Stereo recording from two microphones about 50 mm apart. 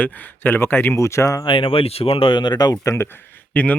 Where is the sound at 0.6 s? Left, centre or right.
Left.